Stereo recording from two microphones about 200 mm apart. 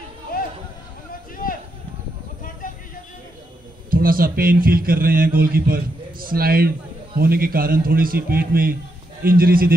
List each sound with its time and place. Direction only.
1.3 s run: 45° left (ahead or behind)
3.9 s a man's voice: 45° right (ahead or behind)